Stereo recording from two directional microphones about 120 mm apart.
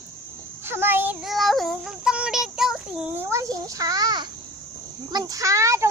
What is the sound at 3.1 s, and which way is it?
A child's voice, 25° right (ahead or behind).